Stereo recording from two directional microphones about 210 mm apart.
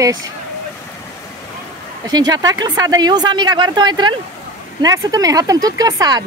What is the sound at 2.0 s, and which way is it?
Speech, 20° right (ahead or behind).